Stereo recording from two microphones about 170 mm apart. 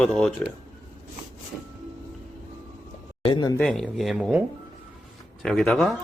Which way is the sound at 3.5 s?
Centre (ahead or behind).